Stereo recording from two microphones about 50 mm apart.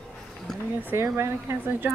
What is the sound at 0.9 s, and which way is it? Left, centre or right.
Speech, right.